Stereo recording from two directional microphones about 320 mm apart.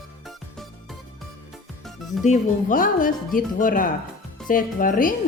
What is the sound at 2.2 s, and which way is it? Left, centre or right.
Speech, left.